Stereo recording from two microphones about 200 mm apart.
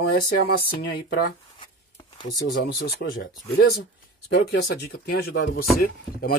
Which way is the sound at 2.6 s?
65° left (ahead or behind).